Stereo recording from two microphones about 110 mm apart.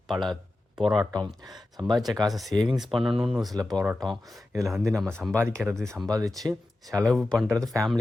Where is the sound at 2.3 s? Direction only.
Centre (ahead or behind).